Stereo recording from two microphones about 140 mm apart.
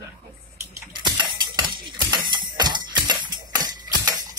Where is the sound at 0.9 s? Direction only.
35° right (ahead or behind).